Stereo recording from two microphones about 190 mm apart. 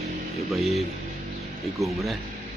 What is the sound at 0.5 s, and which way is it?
Speech, centre (ahead or behind).